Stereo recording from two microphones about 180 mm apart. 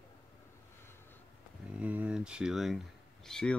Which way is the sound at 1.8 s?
10° right (ahead or behind).